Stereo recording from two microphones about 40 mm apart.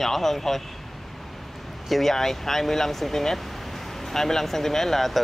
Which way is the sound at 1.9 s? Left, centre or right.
Centre.